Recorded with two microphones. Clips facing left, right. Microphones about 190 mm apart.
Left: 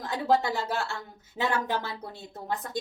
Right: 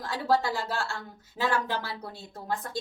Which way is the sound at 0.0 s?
20° left (ahead or behind).